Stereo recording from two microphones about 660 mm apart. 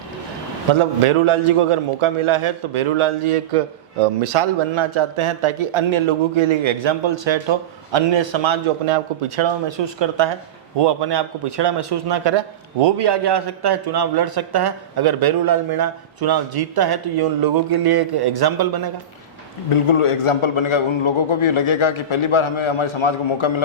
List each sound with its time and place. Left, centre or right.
0.7 s a man's voice: right
19.7 s a man's voice: left